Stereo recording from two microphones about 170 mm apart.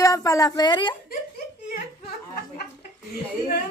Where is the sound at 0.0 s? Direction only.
20° left (ahead or behind).